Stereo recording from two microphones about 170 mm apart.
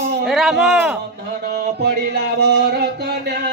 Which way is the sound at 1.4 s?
75° right (ahead or behind).